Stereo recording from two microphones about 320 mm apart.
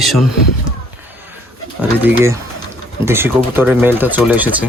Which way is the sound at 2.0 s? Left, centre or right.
Centre.